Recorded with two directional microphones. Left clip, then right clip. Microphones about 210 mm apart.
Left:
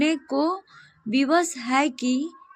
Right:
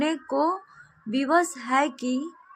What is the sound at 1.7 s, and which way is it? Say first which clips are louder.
Speech: left 1 dB; 70° left (ahead or behind).